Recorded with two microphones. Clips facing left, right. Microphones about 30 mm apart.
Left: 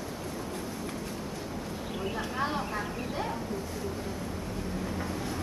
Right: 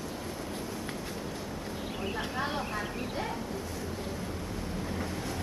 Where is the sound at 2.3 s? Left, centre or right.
Centre.